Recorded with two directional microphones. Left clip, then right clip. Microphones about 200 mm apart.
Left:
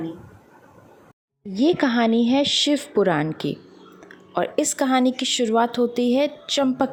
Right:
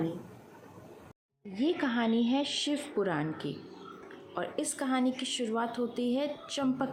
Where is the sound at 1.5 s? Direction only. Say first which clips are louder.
Left 11 dB; 45° left (ahead or behind).